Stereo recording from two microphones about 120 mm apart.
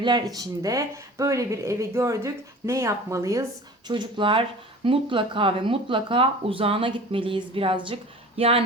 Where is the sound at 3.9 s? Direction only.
40° right (ahead or behind).